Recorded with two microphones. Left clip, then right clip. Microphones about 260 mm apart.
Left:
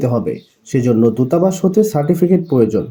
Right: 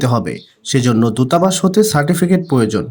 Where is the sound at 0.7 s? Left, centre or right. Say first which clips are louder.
Left 2 dB; right.